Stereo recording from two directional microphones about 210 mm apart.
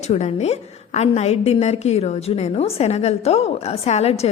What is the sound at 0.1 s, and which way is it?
A woman's voice, 30° left (ahead or behind).